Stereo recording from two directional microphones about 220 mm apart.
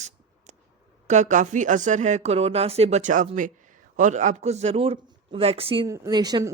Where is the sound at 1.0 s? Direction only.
35° right (ahead or behind).